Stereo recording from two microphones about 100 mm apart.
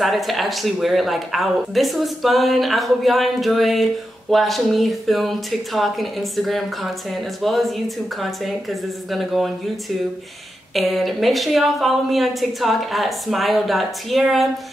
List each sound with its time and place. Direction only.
0.0 s speech: centre (ahead or behind)
10.7 s speech: centre (ahead or behind)